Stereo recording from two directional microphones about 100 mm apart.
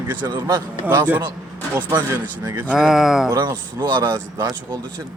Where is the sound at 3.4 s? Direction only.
45° right (ahead or behind).